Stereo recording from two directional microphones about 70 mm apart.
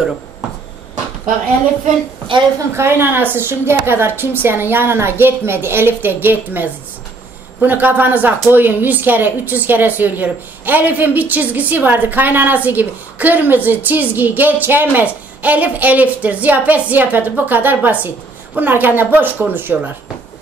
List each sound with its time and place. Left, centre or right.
2.7 s a woman's voice: right